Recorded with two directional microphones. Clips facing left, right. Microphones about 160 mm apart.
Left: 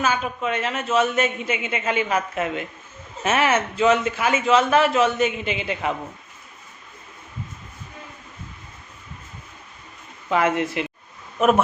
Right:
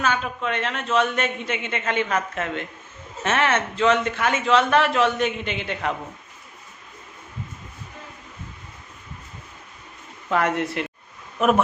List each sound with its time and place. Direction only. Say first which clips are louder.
0.0 s a man's voice: left 1 dB; 5° left (ahead or behind)
10.2 s a man's voice: left 2 dB; centre (ahead or behind)